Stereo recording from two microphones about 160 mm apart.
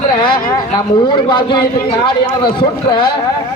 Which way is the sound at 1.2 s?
30° left (ahead or behind).